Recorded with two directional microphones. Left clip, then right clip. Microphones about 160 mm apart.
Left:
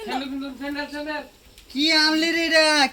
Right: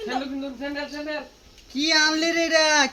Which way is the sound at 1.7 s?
20° right (ahead or behind).